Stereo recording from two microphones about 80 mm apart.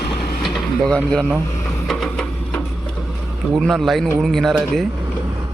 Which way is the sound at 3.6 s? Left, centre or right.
Centre.